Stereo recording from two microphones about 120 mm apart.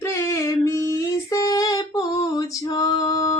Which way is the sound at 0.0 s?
25° left (ahead or behind).